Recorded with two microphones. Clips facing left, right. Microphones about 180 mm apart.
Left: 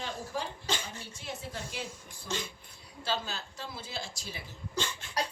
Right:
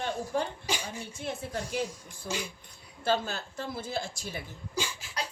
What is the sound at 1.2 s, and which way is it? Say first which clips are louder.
Speech: right 6 dB; 55° right (ahead or behind).